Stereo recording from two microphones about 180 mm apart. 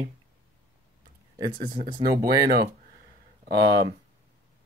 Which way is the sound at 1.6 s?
50° right (ahead or behind).